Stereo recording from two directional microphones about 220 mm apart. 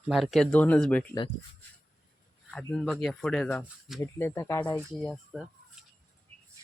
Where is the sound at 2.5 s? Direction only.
5° left (ahead or behind).